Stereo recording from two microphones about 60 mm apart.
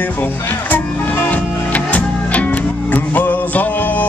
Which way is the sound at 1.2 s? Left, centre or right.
Left.